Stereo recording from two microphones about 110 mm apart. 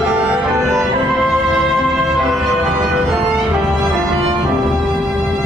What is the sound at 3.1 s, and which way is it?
Music, centre (ahead or behind).